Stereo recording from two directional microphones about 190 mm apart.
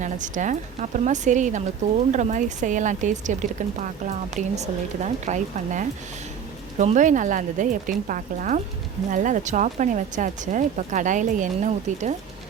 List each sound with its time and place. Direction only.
0.0 s a woman's voice: 40° right (ahead or behind)